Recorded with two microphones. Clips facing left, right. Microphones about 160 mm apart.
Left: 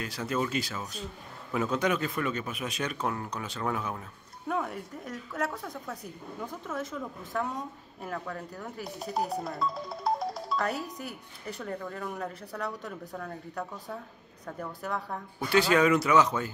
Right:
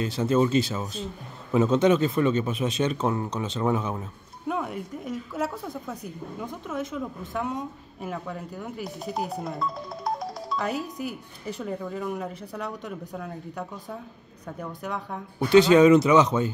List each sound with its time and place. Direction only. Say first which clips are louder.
0.0 s a man's voice: right 9 dB; 25° right (ahead or behind)
4.5 s a woman's voice: right 3 dB; 10° right (ahead or behind)
13.1 s a woman's voice: right 3 dB; 5° right (ahead or behind)
15.3 s a man's voice: right 8 dB; 20° right (ahead or behind)